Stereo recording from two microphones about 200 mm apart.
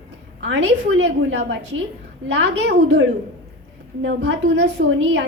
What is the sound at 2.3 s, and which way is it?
A woman's voice, 60° right (ahead or behind).